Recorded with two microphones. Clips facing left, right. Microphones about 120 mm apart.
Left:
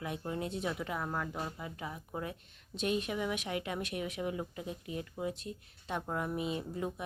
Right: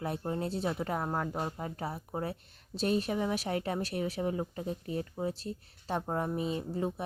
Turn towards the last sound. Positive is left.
turn(degrees=-30)  # may be behind; listen again after turning